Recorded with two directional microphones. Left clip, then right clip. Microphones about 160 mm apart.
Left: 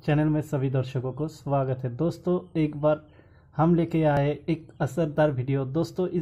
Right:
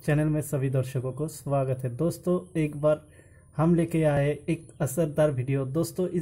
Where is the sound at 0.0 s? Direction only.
10° right (ahead or behind).